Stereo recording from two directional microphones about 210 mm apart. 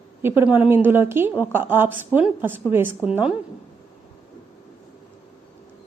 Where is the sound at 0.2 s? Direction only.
10° right (ahead or behind).